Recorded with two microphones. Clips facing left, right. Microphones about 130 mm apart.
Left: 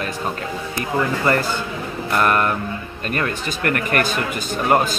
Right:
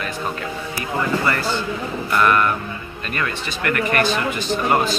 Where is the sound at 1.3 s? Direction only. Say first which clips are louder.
Left 2 dB; 50° left (ahead or behind).